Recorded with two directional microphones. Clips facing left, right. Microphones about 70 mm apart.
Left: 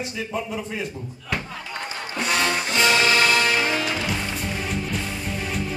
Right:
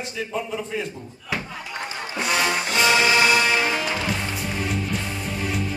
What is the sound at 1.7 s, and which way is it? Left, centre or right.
Music, centre.